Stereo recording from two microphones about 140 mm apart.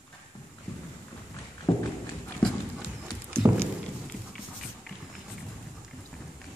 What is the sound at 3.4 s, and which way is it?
Walk, 20° right (ahead or behind).